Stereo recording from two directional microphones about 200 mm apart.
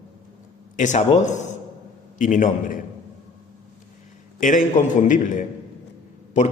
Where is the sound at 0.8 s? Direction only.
35° left (ahead or behind).